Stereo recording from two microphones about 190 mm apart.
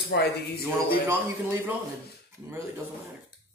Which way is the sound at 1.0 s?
10° right (ahead or behind).